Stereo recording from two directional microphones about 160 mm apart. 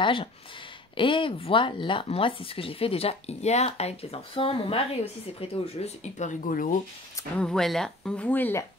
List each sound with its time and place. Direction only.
0.0 s speech: 35° left (ahead or behind); by 6.8 s 55° left (ahead or behind)
7.3 s speech: 5° left (ahead or behind)